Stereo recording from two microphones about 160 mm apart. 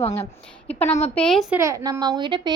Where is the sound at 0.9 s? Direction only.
40° left (ahead or behind).